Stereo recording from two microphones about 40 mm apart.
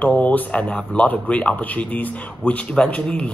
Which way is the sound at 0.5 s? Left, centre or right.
Left.